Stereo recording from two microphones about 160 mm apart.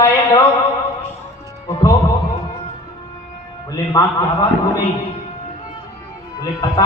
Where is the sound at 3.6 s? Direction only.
20° left (ahead or behind).